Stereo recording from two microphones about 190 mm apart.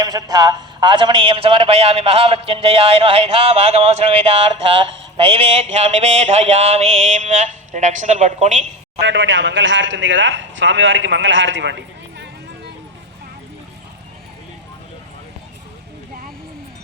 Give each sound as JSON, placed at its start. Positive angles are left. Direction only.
{"t": 0.0, "sound": "a man's voice", "side_deg": -20}
{"t": 9.0, "sound": "speech", "side_deg": -75}